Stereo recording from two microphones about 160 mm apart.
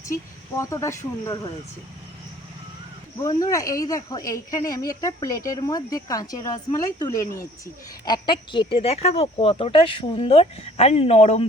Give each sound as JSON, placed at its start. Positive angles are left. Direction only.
{"t": 0.0, "sound": "speech", "side_deg": 20}
{"t": 3.2, "sound": "speech", "side_deg": 20}